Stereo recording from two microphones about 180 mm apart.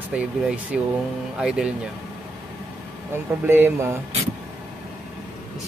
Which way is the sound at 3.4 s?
15° right (ahead or behind).